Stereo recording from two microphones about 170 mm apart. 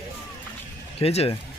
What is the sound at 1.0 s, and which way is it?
Speech, 35° left (ahead or behind).